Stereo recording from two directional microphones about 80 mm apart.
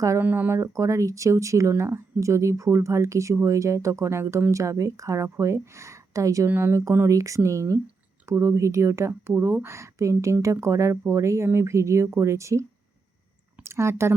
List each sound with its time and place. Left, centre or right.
0.2 s speech: right
6.5 s speech: right